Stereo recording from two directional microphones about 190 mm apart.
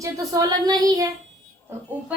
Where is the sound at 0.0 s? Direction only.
20° right (ahead or behind).